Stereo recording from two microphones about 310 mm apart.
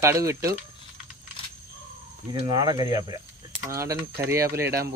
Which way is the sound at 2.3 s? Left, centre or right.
Centre.